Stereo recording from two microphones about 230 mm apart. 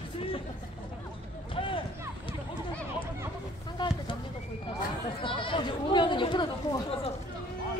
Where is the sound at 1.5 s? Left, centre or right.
Left.